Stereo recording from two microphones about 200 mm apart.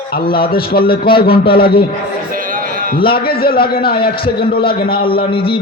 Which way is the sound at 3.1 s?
50° left (ahead or behind).